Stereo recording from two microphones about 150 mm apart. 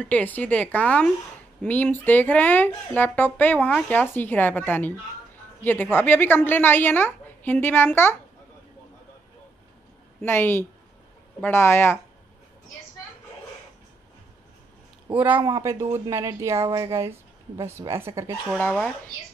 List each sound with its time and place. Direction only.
0.0 s speech: 10° left (ahead or behind)
10.2 s speech: 15° left (ahead or behind)
15.1 s a woman's voice: 10° right (ahead or behind)